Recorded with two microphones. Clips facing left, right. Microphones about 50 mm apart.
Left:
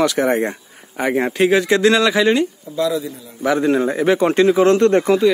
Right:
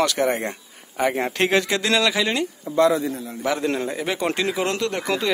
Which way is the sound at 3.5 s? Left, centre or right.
Centre.